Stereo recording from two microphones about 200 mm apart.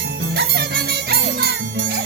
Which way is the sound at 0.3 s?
55° right (ahead or behind).